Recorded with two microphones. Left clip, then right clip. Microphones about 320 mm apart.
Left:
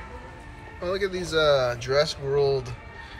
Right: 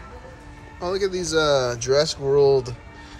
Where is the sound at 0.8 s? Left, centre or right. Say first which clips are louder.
Right 3 dB; centre.